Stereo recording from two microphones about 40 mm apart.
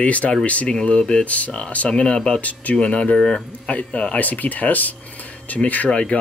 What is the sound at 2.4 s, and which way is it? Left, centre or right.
Speech, left.